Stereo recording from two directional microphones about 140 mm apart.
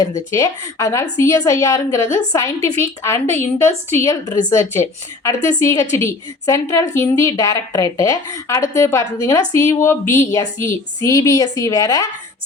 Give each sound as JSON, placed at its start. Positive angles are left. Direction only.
{"t": 0.3, "sound": "a woman's voice", "side_deg": 20}